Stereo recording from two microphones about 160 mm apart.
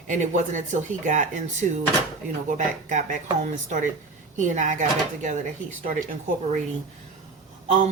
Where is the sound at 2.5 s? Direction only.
50° right (ahead or behind).